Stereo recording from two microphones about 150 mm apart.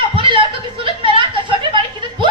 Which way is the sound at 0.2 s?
35° right (ahead or behind).